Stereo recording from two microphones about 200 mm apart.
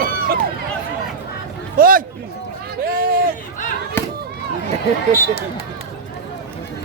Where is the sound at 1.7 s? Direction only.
45° right (ahead or behind).